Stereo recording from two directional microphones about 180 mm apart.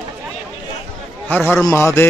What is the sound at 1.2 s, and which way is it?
Speech, 10° left (ahead or behind).